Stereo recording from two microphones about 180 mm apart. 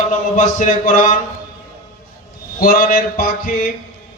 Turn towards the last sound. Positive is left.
turn(degrees=55)  # may be behind; listen again after turning